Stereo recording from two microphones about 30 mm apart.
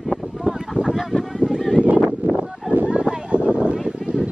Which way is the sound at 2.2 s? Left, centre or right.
Right.